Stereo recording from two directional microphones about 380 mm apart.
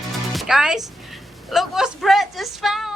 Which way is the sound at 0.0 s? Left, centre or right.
Centre.